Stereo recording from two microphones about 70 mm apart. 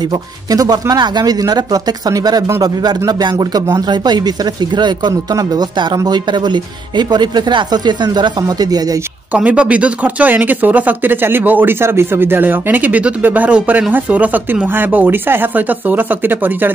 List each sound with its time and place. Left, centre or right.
0.1 s speech: right
2.6 s speech: right
5.4 s speech: right
9.3 s speech: right